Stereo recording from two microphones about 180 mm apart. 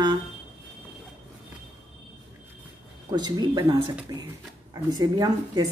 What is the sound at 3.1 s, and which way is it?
A woman's voice, 25° right (ahead or behind).